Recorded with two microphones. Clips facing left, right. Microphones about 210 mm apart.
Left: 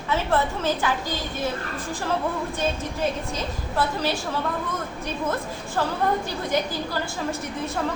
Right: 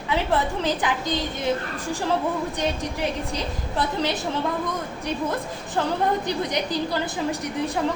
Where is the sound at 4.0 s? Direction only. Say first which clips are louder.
Right 1 dB; 20° right (ahead or behind).